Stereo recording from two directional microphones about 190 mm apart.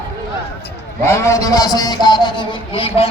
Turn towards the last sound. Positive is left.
turn(degrees=30)  # may be behind; listen again after turning